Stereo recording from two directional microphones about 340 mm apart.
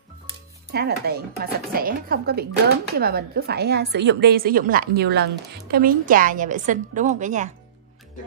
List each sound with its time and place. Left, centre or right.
0.7 s a woman's voice: right